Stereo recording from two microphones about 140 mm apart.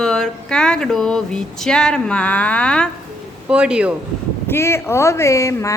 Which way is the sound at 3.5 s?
5° right (ahead or behind).